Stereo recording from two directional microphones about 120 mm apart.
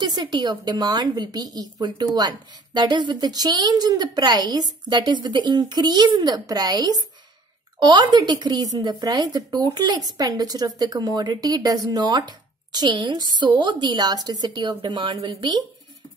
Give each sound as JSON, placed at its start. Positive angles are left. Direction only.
{"t": 0.0, "sound": "a woman's voice", "side_deg": -35}